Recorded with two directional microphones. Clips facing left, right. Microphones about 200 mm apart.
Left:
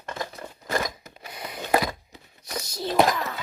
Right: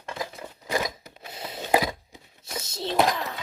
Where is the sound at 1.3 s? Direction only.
25° right (ahead or behind).